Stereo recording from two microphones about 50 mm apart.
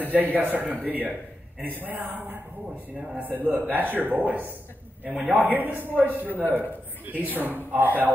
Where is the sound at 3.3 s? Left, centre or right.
Right.